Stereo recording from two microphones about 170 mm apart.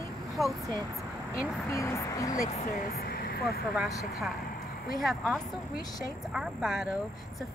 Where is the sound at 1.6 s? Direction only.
15° left (ahead or behind).